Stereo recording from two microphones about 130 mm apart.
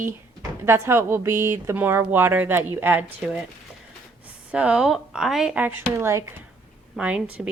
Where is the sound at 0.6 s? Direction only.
20° right (ahead or behind).